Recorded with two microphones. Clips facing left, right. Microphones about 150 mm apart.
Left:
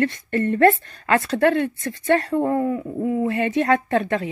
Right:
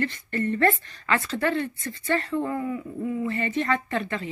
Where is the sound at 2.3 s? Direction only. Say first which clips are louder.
Left 7 dB; 40° left (ahead or behind).